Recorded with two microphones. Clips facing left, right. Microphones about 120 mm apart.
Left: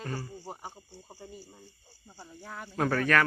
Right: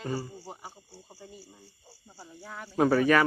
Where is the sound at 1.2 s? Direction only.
10° right (ahead or behind).